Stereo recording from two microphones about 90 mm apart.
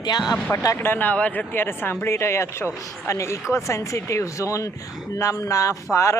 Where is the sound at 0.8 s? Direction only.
20° left (ahead or behind).